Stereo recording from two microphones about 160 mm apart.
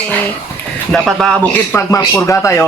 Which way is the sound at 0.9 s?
5° left (ahead or behind).